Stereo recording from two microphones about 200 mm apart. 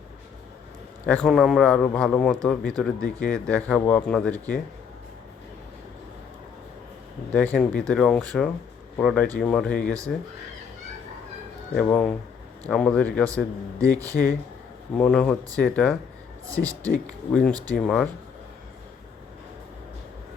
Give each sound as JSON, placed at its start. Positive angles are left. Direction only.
{"t": 1.0, "sound": "a man's voice", "side_deg": 5}
{"t": 7.3, "sound": "a man's voice", "side_deg": 5}
{"t": 11.7, "sound": "a man's voice", "side_deg": 5}
{"t": 14.0, "sound": "speech", "side_deg": -15}
{"t": 14.9, "sound": "a man's voice", "side_deg": 5}
{"t": 16.6, "sound": "speech", "side_deg": 50}
{"t": 17.3, "sound": "a man's voice", "side_deg": 5}